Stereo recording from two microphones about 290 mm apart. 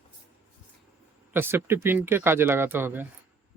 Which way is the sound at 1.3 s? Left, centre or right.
Centre.